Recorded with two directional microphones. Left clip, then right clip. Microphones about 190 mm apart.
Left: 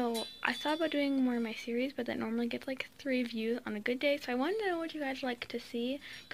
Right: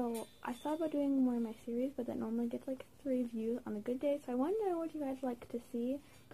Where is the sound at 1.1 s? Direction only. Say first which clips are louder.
Left 2 dB; 20° left (ahead or behind).